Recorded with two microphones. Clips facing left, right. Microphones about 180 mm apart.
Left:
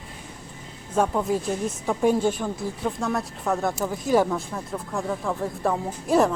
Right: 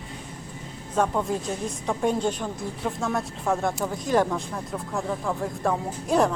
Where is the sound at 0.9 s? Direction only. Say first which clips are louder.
Left 2 dB; 5° left (ahead or behind).